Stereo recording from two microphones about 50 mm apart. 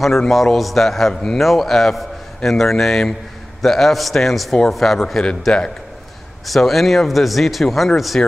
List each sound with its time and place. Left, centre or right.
0.3 s a man's voice: centre
8.2 s speech: left